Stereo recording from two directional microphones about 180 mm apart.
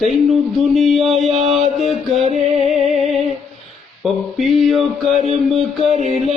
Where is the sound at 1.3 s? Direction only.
35° right (ahead or behind).